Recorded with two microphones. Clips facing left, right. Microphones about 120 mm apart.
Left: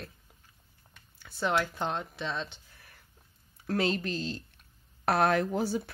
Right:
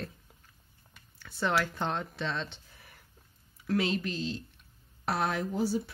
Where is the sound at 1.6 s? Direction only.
10° left (ahead or behind).